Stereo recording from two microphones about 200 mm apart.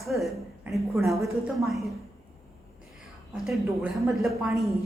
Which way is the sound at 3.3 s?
Centre (ahead or behind).